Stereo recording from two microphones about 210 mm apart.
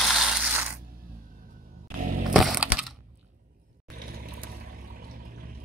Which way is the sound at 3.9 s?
40° right (ahead or behind).